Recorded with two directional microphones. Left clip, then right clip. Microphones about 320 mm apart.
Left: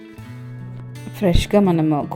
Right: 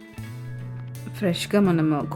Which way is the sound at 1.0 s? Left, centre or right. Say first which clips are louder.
Left 6 dB; centre.